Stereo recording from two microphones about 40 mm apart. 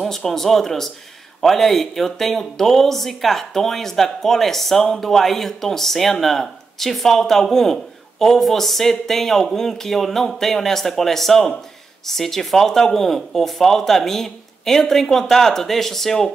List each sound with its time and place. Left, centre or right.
0.0 s speech: centre